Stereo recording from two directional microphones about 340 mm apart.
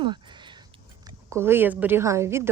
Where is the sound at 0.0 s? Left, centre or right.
Centre.